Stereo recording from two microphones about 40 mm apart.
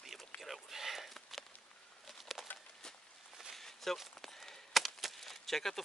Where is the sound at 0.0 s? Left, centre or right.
Centre.